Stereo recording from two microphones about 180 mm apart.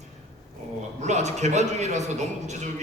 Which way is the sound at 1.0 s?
40° right (ahead or behind).